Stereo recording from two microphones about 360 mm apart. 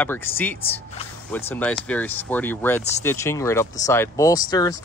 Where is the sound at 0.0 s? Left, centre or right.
Centre.